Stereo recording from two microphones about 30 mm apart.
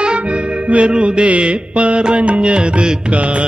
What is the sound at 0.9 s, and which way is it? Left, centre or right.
Mantra, right.